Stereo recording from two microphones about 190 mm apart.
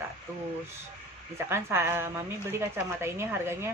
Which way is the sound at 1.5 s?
15° right (ahead or behind).